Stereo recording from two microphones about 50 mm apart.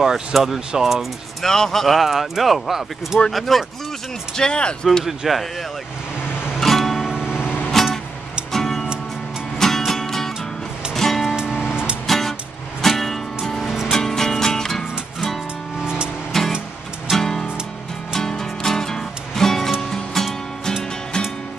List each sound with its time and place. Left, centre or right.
0.0 s speech: centre
1.4 s speech: centre
4.4 s speech: centre
5.0 s speech: centre
6.6 s music: centre
7.2 s music: centre
7.4 s music: left
7.7 s music: centre
11.7 s music: centre
12.1 s music: centre
16.3 s music: centre